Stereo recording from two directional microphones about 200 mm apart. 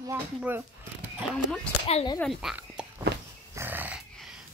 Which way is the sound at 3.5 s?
10° right (ahead or behind).